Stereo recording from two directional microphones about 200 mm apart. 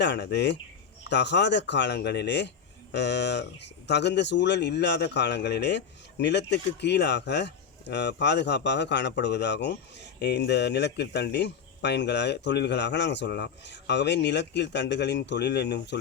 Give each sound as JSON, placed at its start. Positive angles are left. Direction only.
{"t": 0.0, "sound": "speech", "side_deg": 60}